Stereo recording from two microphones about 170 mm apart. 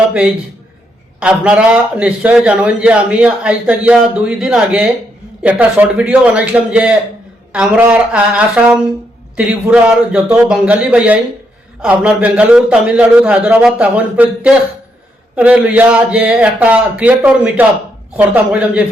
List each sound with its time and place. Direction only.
0.1 s a man's voice: 5° right (ahead or behind)
9.3 s a man's voice: 5° right (ahead or behind)